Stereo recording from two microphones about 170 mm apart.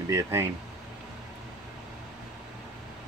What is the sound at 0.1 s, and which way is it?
Speech, 15° right (ahead or behind).